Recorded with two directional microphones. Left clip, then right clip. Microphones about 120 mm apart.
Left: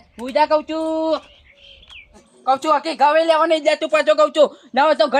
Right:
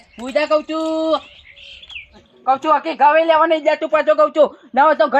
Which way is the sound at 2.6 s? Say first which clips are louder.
Right 3 dB; 10° left (ahead or behind).